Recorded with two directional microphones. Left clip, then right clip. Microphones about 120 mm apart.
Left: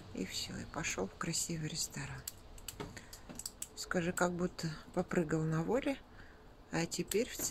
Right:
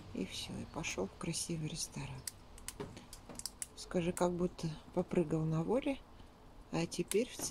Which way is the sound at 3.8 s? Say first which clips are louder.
Left 1 dB; 20° right (ahead or behind).